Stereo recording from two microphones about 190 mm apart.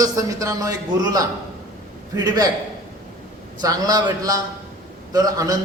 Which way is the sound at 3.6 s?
20° right (ahead or behind).